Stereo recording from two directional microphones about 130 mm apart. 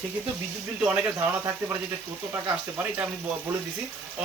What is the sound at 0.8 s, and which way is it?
Speech, 10° right (ahead or behind).